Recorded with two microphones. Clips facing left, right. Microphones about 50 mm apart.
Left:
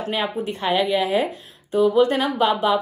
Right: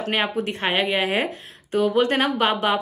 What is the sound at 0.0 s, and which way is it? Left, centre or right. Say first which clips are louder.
Speech: right 1 dB; right.